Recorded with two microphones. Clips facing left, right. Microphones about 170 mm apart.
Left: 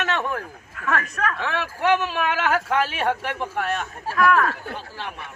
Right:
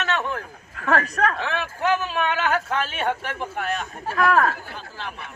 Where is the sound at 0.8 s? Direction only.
35° right (ahead or behind).